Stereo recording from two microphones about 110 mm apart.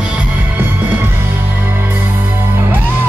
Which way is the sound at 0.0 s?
10° right (ahead or behind).